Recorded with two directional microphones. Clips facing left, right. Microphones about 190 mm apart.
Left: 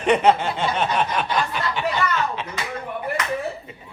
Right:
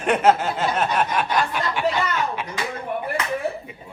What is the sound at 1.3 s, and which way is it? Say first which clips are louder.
Snicker: right 1 dB; 10° right (ahead or behind).